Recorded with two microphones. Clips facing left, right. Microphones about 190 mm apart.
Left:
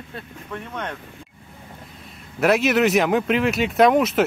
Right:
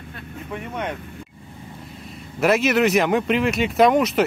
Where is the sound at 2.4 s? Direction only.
Centre (ahead or behind).